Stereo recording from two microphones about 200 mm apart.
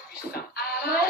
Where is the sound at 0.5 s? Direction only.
50° left (ahead or behind).